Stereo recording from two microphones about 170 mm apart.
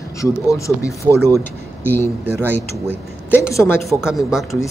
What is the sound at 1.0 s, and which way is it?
Speech, 20° right (ahead or behind).